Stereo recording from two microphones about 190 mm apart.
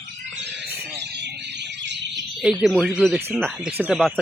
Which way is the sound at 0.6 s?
60° right (ahead or behind).